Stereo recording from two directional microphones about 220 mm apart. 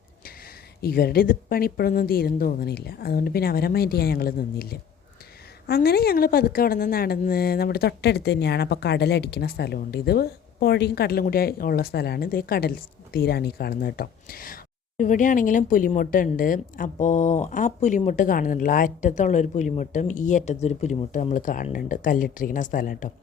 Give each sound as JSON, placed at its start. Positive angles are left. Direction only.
{"t": 0.8, "sound": "a woman's voice", "side_deg": 45}